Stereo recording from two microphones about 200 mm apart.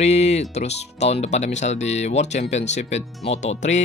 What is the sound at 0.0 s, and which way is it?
Speech, 35° left (ahead or behind).